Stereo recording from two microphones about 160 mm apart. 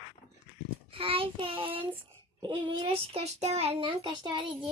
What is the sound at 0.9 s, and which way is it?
A child's voice, 35° right (ahead or behind).